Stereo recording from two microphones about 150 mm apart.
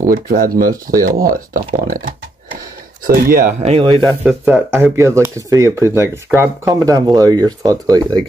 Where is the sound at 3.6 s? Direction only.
40° right (ahead or behind).